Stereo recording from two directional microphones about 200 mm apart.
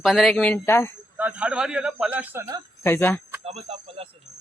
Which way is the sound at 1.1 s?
5° right (ahead or behind).